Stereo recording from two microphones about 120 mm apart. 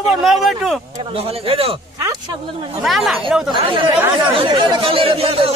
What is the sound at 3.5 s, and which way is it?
Speech, 45° right (ahead or behind).